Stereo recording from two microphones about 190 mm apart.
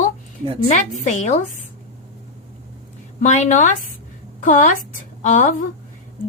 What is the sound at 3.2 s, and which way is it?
Speech, 40° left (ahead or behind).